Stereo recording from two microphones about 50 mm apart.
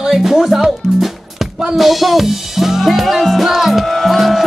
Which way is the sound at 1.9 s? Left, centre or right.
Centre.